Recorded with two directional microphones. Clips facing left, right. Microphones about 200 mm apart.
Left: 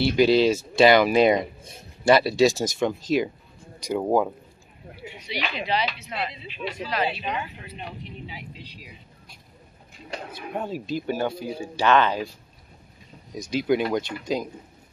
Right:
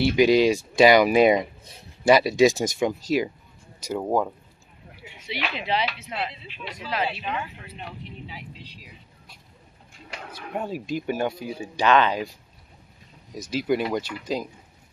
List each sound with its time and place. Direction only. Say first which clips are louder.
0.0 s speech: right 1 dB; 10° right (ahead or behind)
7.1 s speech: left 1 dB; 15° left (ahead or behind)
10.5 s speech: even; 10° right (ahead or behind)
13.3 s speech: left 2 dB; 5° right (ahead or behind)